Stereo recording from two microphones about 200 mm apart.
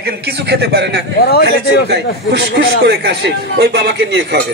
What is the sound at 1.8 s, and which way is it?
Speech, 55° right (ahead or behind).